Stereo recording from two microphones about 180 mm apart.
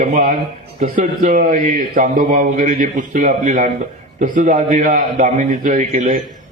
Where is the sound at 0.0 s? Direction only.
45° right (ahead or behind).